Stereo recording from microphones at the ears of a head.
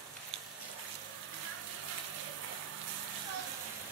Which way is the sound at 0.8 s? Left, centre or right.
Right.